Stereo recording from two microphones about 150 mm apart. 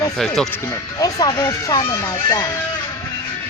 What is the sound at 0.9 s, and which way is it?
Speech, 25° left (ahead or behind).